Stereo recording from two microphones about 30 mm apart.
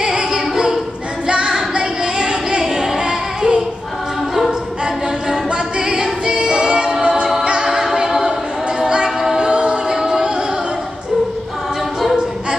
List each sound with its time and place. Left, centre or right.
0.0 s choir: right
1.2 s female singing: right
3.1 s singing: right
5.8 s music: right
6.4 s choir: right
7.0 s a capella: right
8.8 s music: right
9.5 s music: right